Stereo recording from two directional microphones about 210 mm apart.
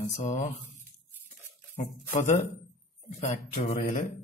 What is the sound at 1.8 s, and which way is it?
Speech, 35° left (ahead or behind).